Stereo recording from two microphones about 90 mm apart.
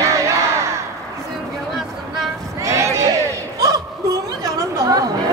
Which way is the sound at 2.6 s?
35° right (ahead or behind).